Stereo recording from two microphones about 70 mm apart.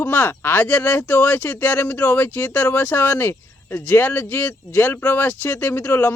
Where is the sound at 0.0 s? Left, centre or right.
Left.